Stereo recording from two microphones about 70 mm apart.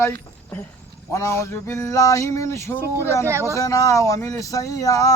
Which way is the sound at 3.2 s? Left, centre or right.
Right.